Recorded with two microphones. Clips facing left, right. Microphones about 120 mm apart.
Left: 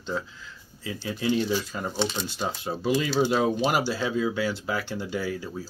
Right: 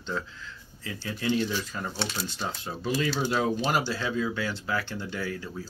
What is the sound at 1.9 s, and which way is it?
Speech, centre (ahead or behind).